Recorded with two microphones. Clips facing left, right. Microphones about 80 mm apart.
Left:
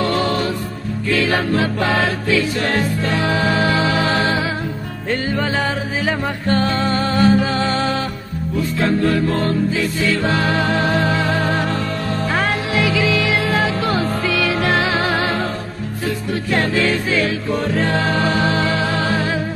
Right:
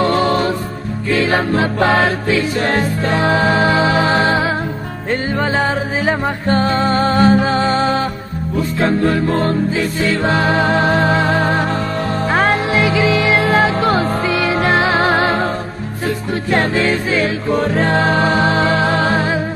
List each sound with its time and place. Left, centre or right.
0.0 s music: right
17.5 s music: right